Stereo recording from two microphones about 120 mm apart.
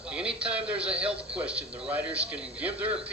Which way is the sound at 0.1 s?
10° right (ahead or behind).